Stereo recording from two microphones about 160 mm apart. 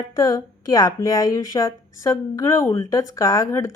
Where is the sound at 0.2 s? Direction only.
20° left (ahead or behind).